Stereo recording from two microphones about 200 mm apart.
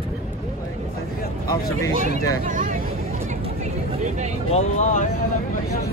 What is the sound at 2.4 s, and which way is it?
Vehicle, 40° right (ahead or behind).